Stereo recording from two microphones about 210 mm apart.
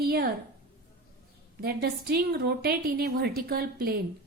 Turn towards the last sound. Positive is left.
turn(degrees=-45)  # may be behind; listen again after turning